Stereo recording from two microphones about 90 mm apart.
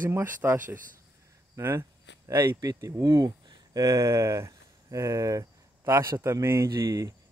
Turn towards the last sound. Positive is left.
turn(degrees=-45)  # may be behind; listen again after turning